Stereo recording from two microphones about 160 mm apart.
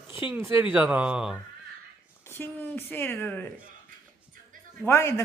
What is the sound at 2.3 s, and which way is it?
Speech, 15° left (ahead or behind).